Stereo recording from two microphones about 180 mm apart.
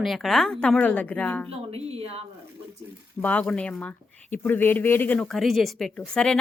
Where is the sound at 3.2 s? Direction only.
5° left (ahead or behind).